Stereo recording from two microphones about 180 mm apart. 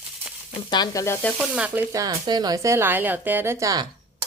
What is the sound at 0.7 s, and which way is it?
Speech, 20° left (ahead or behind).